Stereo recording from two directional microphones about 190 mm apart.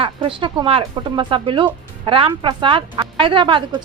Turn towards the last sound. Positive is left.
turn(degrees=-25)  # may be behind; listen again after turning